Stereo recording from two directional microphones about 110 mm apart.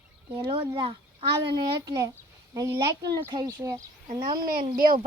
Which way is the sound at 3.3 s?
35° right (ahead or behind).